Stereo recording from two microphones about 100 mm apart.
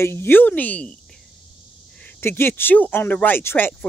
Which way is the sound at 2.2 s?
25° left (ahead or behind).